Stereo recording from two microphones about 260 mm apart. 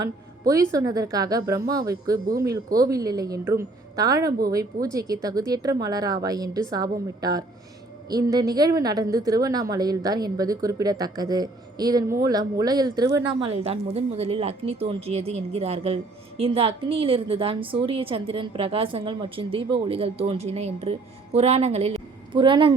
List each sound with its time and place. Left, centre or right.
0.0 s a woman's voice: centre